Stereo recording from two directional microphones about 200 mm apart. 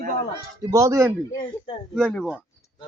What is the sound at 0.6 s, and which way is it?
Speech, 15° right (ahead or behind).